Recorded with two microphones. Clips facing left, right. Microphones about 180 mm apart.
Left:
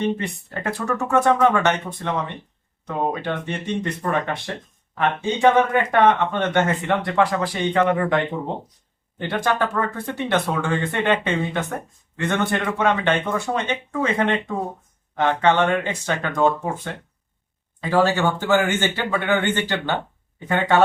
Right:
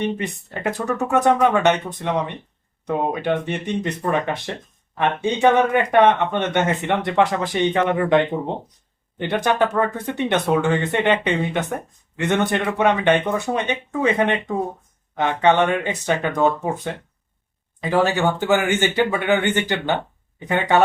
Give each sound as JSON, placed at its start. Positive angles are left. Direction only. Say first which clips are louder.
{"t": 0.2, "sound": "speech", "louder": "right 2 dB", "side_deg": -15}